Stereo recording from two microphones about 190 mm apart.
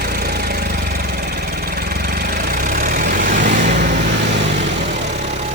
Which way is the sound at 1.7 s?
55° right (ahead or behind).